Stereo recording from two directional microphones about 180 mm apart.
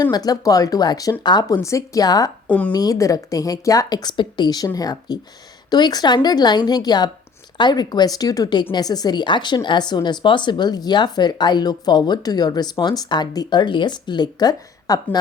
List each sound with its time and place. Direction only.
0.0 s a woman's voice: 20° left (ahead or behind)
2.5 s a woman's voice: 5° left (ahead or behind)
2.7 s a woman's voice: 20° left (ahead or behind)